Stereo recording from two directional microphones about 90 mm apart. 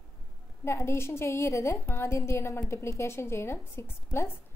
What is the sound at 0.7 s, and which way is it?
A woman's voice, 30° left (ahead or behind).